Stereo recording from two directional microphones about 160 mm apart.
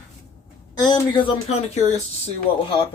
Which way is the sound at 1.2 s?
35° left (ahead or behind).